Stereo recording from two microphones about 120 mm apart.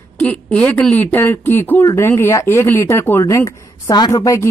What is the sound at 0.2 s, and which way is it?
A woman's voice, 10° left (ahead or behind).